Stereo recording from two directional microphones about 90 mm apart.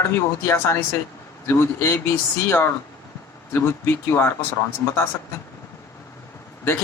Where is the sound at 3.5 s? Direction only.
30° left (ahead or behind).